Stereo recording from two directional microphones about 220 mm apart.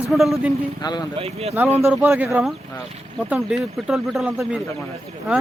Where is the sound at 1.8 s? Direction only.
10° right (ahead or behind).